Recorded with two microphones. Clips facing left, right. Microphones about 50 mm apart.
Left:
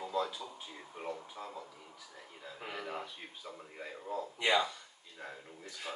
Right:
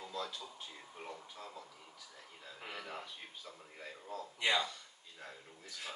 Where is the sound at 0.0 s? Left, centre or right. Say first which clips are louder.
Left 7 dB; centre.